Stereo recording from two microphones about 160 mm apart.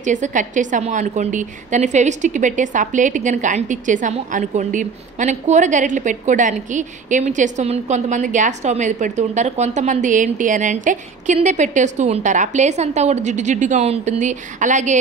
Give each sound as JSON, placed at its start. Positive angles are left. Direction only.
{"t": 0.0, "sound": "a woman's voice", "side_deg": -50}